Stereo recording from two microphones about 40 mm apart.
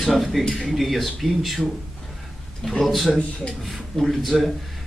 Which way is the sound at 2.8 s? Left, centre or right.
Centre.